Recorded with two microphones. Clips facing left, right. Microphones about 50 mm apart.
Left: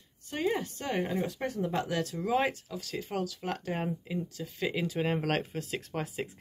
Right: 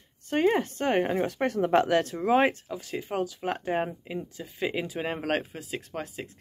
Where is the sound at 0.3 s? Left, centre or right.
Right.